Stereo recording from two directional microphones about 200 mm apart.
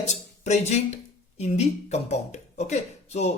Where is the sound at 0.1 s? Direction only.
35° left (ahead or behind).